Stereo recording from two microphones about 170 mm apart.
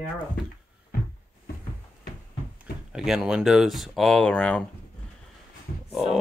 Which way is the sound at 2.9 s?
5° right (ahead or behind).